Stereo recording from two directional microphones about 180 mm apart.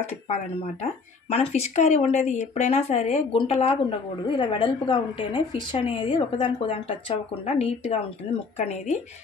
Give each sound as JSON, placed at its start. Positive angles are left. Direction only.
{"t": 1.3, "sound": "a woman's voice", "side_deg": 35}